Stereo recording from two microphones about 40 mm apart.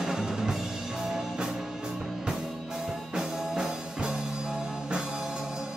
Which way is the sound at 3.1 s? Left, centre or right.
Centre.